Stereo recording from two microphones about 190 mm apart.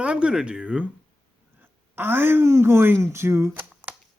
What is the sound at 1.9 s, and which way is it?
A man's voice, 10° right (ahead or behind).